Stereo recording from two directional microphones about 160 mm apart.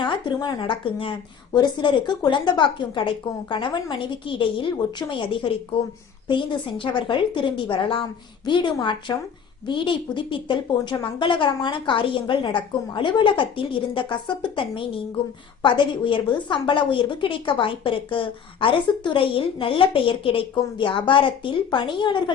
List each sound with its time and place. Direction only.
0.0 s a woman's voice: 30° left (ahead or behind)